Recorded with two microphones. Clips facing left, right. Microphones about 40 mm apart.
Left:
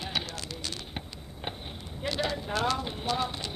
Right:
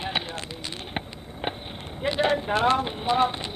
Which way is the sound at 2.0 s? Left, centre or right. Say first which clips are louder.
Right 8 dB; right.